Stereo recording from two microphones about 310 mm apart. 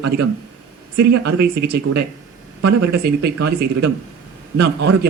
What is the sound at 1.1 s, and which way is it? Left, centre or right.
Speech, right.